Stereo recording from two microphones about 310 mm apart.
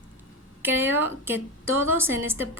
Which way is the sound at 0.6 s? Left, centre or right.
Centre.